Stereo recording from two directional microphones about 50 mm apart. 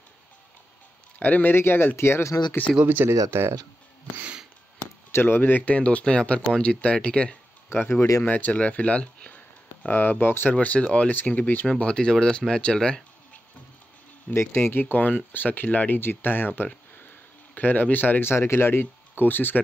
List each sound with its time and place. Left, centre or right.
1.4 s speech: left
2.8 s speech: right
3.1 s speech: right
5.1 s speech: left
5.7 s speech: left
7.7 s speech: left
8.3 s speech: left
9.8 s speech: left
10.5 s speech: left
11.1 s speech: left
11.6 s speech: centre
14.3 s speech: left
16.0 s speech: left
18.2 s speech: left